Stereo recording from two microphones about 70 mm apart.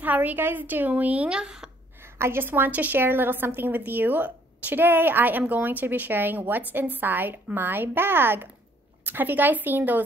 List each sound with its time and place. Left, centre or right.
0.0 s a woman's voice: right
2.1 s a woman's voice: right